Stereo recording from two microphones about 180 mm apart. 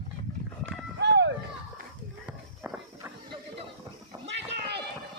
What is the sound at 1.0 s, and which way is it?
Run, 75° right (ahead or behind).